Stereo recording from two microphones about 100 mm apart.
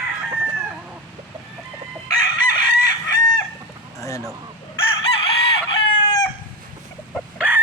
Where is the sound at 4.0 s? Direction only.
35° left (ahead or behind).